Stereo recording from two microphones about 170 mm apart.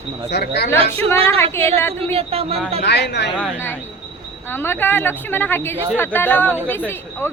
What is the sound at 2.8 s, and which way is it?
Speech, 80° left.